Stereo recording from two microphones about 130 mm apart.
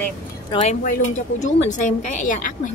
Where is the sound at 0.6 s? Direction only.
65° left (ahead or behind).